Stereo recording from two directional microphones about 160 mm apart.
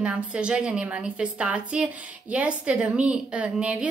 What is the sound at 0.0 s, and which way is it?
A woman's voice, 5° right (ahead or behind).